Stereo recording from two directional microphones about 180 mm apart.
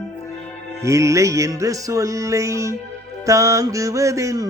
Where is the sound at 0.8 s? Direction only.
15° right (ahead or behind).